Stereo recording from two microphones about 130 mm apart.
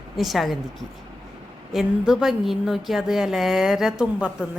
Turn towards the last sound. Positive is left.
turn(degrees=-5)  # may be behind; listen again after turning